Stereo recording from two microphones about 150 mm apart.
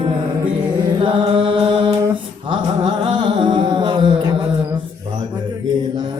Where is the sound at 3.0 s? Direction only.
35° right (ahead or behind).